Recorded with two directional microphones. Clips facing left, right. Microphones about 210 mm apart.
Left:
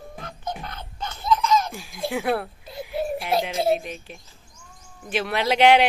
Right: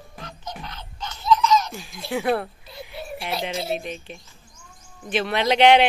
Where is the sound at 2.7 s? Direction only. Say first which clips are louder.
Left 8 dB; 50° left (ahead or behind).